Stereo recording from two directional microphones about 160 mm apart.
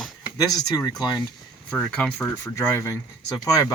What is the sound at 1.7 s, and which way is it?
Speech, 5° left (ahead or behind).